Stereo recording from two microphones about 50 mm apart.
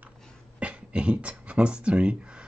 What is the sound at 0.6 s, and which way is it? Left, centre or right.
Speech, right.